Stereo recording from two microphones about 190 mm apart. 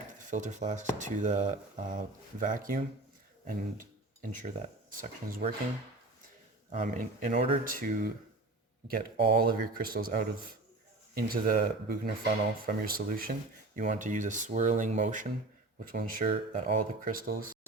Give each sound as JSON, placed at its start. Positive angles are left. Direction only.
{"t": 0.3, "sound": "speech", "side_deg": -40}
{"t": 6.7, "sound": "speech", "side_deg": -40}